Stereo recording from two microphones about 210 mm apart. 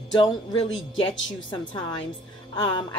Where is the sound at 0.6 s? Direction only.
65° left (ahead or behind).